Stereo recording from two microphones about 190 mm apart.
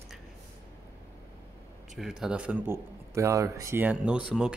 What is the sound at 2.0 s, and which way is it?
Speech, centre (ahead or behind).